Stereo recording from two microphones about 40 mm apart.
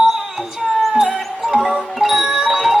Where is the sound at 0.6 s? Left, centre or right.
Centre.